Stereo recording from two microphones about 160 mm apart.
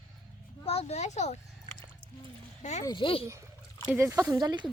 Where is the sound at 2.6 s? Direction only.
50° left (ahead or behind).